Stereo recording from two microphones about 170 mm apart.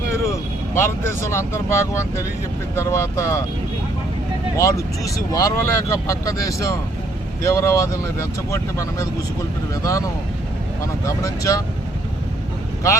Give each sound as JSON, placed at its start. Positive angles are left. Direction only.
{"t": 0.3, "sound": "speech", "side_deg": 15}
{"t": 4.5, "sound": "speech", "side_deg": 20}